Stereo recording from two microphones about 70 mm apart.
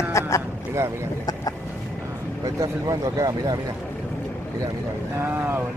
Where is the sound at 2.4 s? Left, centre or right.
Right.